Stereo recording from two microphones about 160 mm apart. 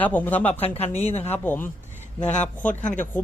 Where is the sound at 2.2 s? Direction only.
45° left (ahead or behind).